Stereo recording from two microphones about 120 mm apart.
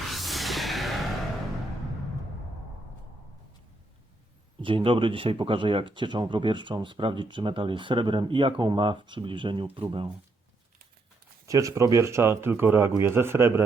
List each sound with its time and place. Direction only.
0.1 s music: centre (ahead or behind)
4.6 s speech: 45° right (ahead or behind)
11.4 s speech: 25° right (ahead or behind)